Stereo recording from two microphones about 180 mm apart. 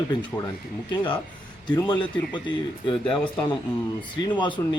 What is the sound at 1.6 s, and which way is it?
Speech, 20° left (ahead or behind).